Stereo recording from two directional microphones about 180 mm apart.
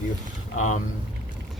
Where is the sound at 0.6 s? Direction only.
45° left (ahead or behind).